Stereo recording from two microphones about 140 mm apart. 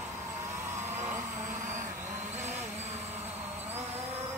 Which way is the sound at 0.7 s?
15° right (ahead or behind).